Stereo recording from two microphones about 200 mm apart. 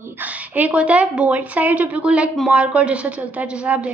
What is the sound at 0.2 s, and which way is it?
A woman's voice, 5° right (ahead or behind).